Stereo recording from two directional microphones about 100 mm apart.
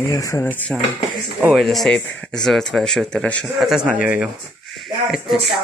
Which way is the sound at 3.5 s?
5° right (ahead or behind).